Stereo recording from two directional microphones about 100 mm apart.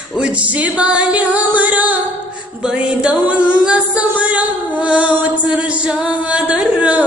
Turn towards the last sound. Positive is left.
turn(degrees=-10)  # may be behind; listen again after turning